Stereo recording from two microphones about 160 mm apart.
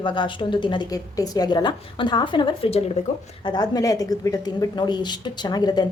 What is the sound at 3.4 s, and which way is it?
A woman's voice, 25° left (ahead or behind).